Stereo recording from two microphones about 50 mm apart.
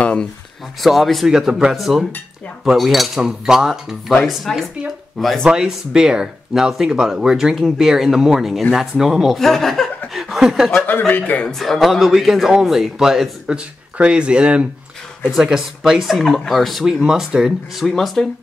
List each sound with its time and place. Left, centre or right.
0.0 s a sound: left
0.7 s a man's voice: centre
9.4 s a man's voice: centre
10.1 s chuckle: centre
10.9 s a man's voice: left
11.4 s a man's voice: centre
14.0 s speech: centre
15.2 s a man's voice: centre
16.8 s speech: centre
17.8 s a man's voice: centre